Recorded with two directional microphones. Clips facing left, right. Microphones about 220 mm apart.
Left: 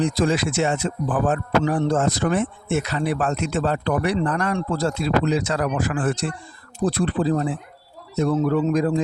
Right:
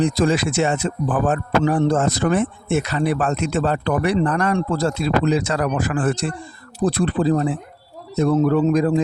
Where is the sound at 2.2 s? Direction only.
75° right (ahead or behind).